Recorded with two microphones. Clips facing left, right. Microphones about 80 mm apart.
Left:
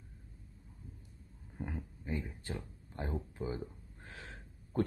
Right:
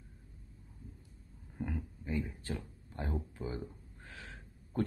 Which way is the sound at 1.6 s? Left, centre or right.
Left.